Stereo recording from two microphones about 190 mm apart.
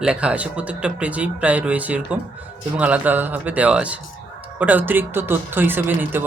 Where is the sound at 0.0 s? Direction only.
5° right (ahead or behind).